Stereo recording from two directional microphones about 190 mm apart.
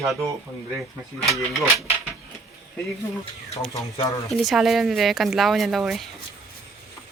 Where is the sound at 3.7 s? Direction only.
20° left (ahead or behind).